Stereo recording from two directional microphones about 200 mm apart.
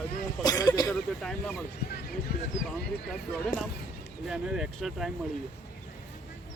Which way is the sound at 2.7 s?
5° left (ahead or behind).